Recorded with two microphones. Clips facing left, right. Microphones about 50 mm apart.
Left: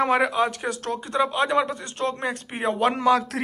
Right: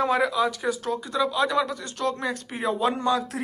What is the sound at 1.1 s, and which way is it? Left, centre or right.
Speech, left.